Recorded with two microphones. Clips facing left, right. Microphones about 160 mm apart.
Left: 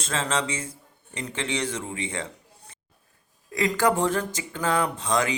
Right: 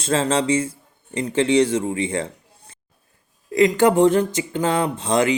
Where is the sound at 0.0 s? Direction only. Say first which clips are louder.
Right 7 dB; 30° right (ahead or behind).